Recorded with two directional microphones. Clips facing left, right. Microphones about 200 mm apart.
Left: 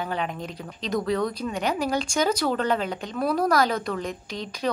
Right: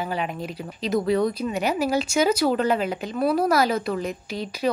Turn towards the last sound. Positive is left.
turn(degrees=-5)  # may be behind; listen again after turning